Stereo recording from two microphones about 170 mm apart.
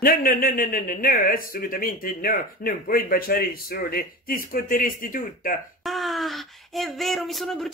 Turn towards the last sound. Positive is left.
turn(degrees=0)  # may be behind; listen again after turning